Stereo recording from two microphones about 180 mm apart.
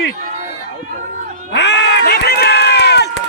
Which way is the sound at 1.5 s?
75° left (ahead or behind).